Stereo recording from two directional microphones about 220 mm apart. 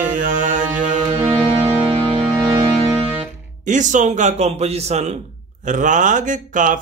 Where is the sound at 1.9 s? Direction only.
20° right (ahead or behind).